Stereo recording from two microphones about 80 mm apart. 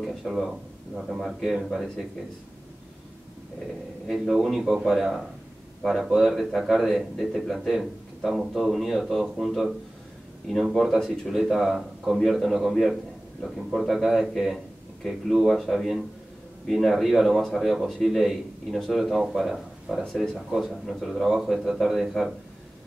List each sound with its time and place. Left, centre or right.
0.0 s a man's voice: centre
4.1 s a man's voice: centre